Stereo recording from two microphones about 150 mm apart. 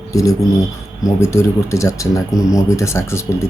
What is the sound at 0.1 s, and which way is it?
Speech, 20° left (ahead or behind).